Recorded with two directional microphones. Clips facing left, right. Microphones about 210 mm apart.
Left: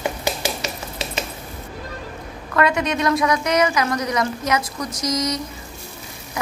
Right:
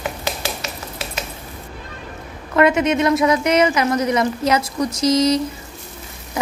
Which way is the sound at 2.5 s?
20° right (ahead or behind).